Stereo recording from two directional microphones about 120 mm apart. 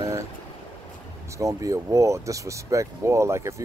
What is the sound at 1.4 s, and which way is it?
Speech, 30° right (ahead or behind).